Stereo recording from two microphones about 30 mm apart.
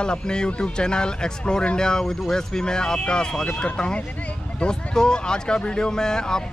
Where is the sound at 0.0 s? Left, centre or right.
Left.